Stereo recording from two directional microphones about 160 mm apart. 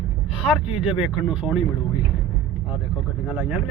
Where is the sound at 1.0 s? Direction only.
5° right (ahead or behind).